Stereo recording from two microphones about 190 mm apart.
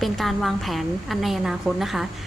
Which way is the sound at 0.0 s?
Centre (ahead or behind).